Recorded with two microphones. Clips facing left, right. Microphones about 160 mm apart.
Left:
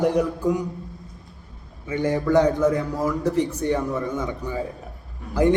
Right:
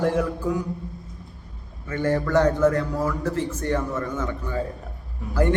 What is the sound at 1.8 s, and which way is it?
A man's voice, 15° left (ahead or behind).